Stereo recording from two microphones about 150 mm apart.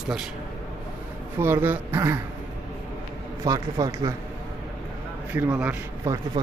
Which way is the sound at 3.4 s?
25° right (ahead or behind).